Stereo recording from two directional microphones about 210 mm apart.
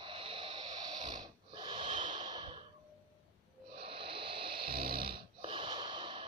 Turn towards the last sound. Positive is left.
turn(degrees=-25)  # may be behind; listen again after turning